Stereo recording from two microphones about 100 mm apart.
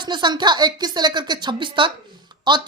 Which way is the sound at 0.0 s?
50° right (ahead or behind).